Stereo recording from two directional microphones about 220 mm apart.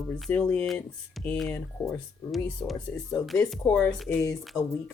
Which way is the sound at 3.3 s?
Centre (ahead or behind).